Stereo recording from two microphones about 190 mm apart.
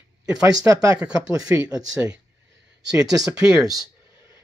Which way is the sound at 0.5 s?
15° right (ahead or behind).